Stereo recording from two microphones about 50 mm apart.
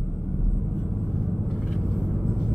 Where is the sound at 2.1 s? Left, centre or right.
Centre.